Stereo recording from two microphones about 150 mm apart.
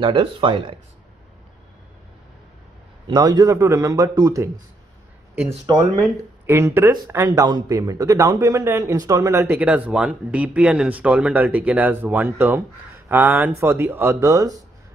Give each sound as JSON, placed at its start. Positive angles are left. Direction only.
{"t": 0.0, "sound": "speech", "side_deg": -35}
{"t": 3.1, "sound": "speech", "side_deg": -25}
{"t": 5.7, "sound": "speech", "side_deg": -15}
{"t": 9.4, "sound": "speech", "side_deg": -10}